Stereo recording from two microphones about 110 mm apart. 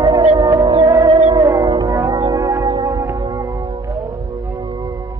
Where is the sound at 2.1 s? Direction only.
45° right (ahead or behind).